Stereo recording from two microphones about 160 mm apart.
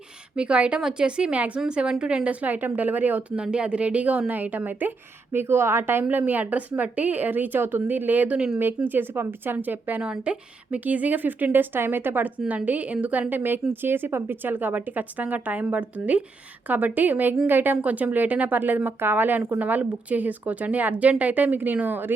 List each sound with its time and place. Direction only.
0.3 s a woman's voice: 5° right (ahead or behind)